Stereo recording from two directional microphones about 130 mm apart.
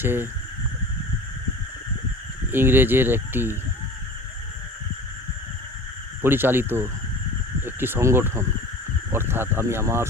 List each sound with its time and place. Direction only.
0.0 s speech: 15° right (ahead or behind)
2.5 s speech: 15° right (ahead or behind)
6.2 s speech: 15° right (ahead or behind)